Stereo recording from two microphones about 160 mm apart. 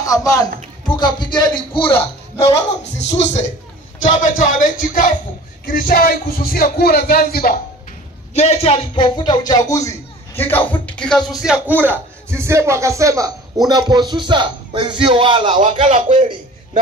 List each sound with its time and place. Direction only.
0.0 s speech: 20° left (ahead or behind)
0.8 s a sound: 25° left (ahead or behind)
1.3 s a man's voice: 30° left (ahead or behind); by 7.5 s 70° left (ahead or behind)
8.4 s a man's voice: 40° left (ahead or behind); by 15.6 s 30° right (ahead or behind)
15.8 s a man's voice: 45° right (ahead or behind)